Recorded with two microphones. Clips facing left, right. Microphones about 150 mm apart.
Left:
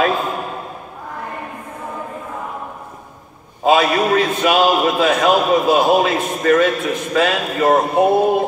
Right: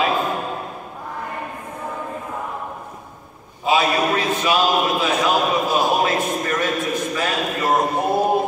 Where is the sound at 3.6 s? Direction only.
55° left (ahead or behind).